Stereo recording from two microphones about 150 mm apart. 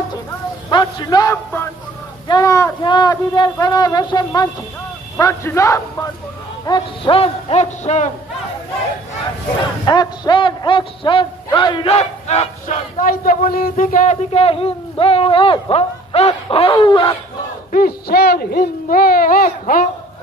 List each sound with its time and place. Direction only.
0.7 s a man's voice: 25° left (ahead or behind)
7.2 s a sound: 40° left (ahead or behind)
9.8 s a man's voice: 30° left (ahead or behind); by 12.7 s 45° left (ahead or behind)
13.0 s a man's voice: 70° left (ahead or behind)
14.3 s a man's voice: 40° left (ahead or behind)
17.7 s speech: 90° left; by 19.9 s 65° left (ahead or behind)